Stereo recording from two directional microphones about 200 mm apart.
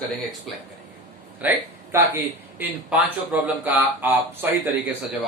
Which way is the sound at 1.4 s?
10° right (ahead or behind).